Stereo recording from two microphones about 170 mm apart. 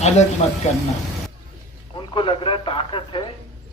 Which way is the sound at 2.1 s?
30° left (ahead or behind).